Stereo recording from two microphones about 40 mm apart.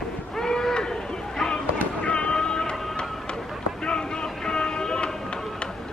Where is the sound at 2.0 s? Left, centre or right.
Left.